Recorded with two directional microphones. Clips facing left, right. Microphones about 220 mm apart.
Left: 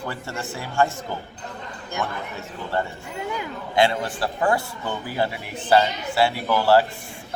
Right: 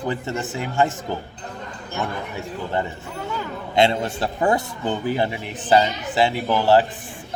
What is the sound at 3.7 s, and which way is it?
A man's voice, 25° right (ahead or behind).